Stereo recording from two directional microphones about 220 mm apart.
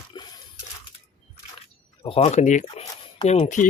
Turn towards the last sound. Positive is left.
turn(degrees=30)  # may be behind; listen again after turning